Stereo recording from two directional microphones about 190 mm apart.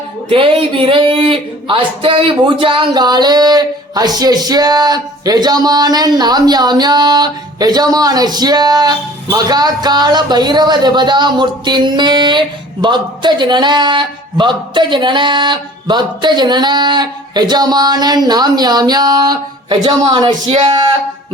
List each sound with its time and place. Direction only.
0.3 s speech: 30° right (ahead or behind)